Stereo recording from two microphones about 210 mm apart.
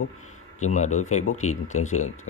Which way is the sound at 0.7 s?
35° left (ahead or behind).